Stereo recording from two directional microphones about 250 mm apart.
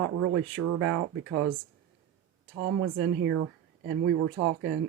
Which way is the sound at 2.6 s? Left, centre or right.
Right.